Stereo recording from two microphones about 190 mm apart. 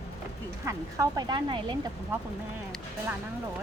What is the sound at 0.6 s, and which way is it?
Speech, 15° right (ahead or behind).